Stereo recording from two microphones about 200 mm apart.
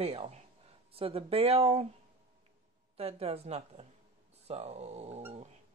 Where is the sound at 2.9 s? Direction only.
30° right (ahead or behind).